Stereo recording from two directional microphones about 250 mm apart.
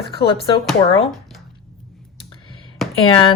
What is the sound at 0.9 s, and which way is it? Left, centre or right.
Speech, left.